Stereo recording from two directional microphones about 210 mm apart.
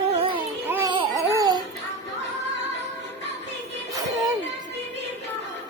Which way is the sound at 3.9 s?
15° right (ahead or behind).